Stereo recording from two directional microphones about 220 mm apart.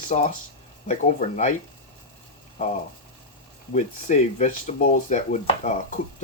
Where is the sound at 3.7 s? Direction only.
35° left (ahead or behind).